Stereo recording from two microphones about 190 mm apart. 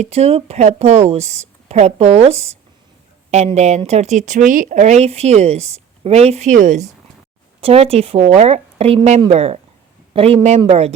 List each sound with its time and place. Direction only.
0.0 s speech: 35° right (ahead or behind)